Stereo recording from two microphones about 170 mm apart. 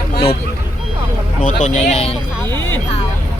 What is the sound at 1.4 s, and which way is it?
Speech, 50° left (ahead or behind).